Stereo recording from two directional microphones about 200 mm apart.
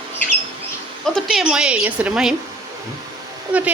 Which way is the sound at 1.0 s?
Centre (ahead or behind).